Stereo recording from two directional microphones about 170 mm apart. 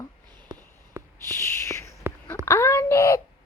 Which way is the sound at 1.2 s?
15° left (ahead or behind).